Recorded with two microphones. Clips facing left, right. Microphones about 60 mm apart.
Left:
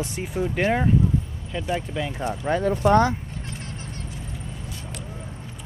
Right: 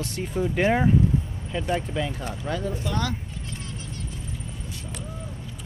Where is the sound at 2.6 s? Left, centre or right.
Left.